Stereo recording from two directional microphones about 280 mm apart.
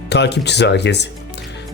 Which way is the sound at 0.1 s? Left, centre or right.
Left.